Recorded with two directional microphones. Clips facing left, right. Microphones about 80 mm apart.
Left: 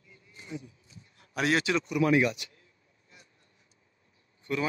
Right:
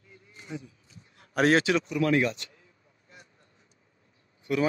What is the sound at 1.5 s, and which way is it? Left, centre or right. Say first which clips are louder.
Speech: right 3 dB; right.